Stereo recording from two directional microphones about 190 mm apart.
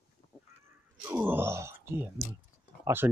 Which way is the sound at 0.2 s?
25° left (ahead or behind).